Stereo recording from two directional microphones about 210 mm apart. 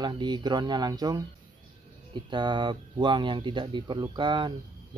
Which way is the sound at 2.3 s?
20° right (ahead or behind).